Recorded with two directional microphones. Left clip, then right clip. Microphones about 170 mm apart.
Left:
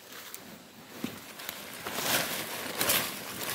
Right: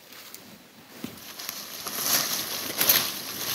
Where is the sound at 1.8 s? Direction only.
25° left (ahead or behind).